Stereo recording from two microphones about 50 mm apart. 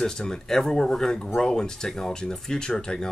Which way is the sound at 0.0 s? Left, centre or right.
Centre.